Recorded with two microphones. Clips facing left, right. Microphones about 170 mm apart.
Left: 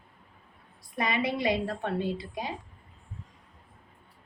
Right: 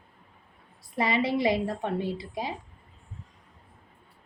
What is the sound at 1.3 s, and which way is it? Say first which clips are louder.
A woman's voice: right 3 dB; 20° right (ahead or behind).